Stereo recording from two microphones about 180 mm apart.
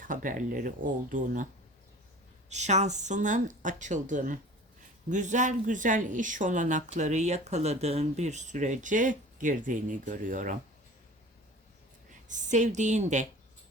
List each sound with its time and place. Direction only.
0.0 s speech: 45° right (ahead or behind)
2.5 s speech: 40° right (ahead or behind)
12.3 s speech: 45° right (ahead or behind)